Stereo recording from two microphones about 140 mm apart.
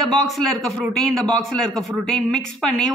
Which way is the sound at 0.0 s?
Centre (ahead or behind).